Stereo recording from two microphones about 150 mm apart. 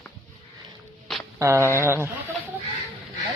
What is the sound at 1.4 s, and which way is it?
Speech, 20° right (ahead or behind).